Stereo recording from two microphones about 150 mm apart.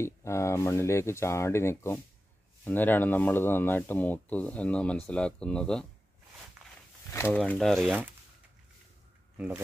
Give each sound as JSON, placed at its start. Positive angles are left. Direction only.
{"t": 0.0, "sound": "speech", "side_deg": 20}
{"t": 6.6, "sound": "walk", "side_deg": -5}
{"t": 7.1, "sound": "speech", "side_deg": 15}
{"t": 7.5, "sound": "speech", "side_deg": 0}